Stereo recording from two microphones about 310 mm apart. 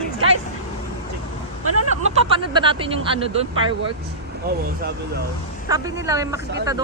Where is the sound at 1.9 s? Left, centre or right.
Right.